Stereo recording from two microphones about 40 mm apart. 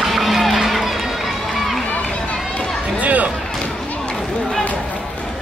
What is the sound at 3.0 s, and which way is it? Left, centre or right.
Music, right.